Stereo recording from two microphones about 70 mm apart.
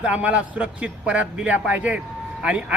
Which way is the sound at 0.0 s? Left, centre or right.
Centre.